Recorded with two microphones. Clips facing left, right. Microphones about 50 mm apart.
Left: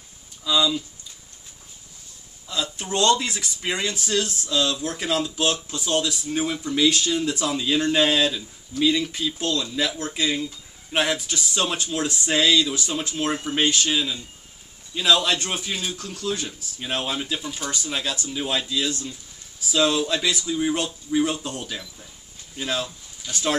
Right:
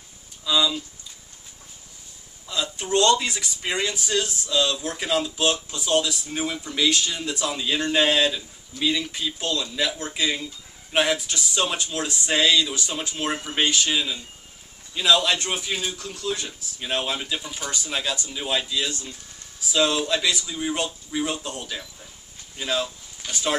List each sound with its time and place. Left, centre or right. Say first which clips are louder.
0.5 s speech: left 1 dB; centre
2.4 s speech: even; centre
23.2 s speech: even; right